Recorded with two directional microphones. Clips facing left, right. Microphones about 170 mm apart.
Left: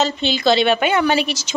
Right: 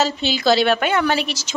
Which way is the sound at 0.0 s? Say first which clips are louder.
Left 1 dB; 5° right (ahead or behind).